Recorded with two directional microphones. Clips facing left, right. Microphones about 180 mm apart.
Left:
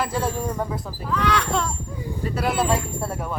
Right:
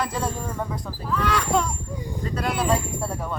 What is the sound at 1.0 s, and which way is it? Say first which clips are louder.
Speech: left 1 dB; 10° right (ahead or behind).